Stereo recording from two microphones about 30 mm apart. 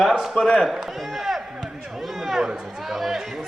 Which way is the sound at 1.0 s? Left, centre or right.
Centre.